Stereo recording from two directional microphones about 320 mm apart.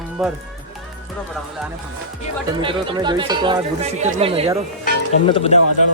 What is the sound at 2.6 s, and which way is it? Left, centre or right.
Speech, centre.